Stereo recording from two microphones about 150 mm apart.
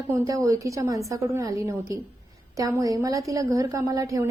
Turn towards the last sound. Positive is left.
turn(degrees=-20)  # may be behind; listen again after turning